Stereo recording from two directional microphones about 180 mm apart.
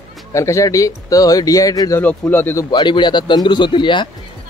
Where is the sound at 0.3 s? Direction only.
15° left (ahead or behind).